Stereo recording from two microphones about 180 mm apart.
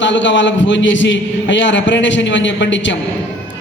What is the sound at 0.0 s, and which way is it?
A man's voice, 90° left.